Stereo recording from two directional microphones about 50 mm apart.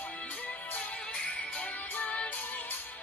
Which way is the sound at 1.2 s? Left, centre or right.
Left.